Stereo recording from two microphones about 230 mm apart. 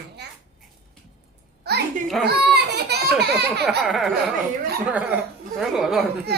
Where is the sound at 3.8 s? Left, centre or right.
Centre.